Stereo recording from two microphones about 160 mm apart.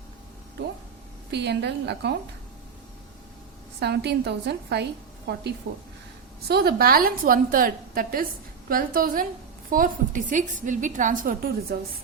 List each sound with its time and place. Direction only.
1.3 s a woman's voice: 90° right
3.8 s a woman's voice: 90° right
6.5 s a woman's voice: 75° right (ahead or behind); by 11.3 s 55° right (ahead or behind)